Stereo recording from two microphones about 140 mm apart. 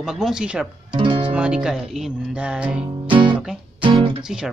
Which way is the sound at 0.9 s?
35° right (ahead or behind).